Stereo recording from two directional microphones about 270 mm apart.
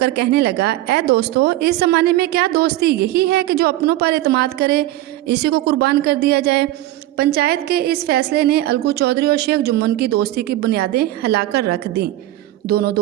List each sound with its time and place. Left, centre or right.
0.0 s a woman's voice: right